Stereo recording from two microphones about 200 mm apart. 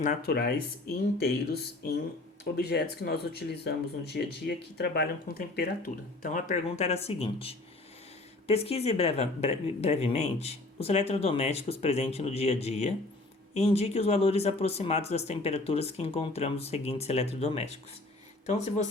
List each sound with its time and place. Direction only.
0.0 s speech: 45° left (ahead or behind)